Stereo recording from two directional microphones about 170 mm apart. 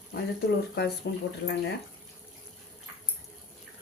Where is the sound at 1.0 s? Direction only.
80° left.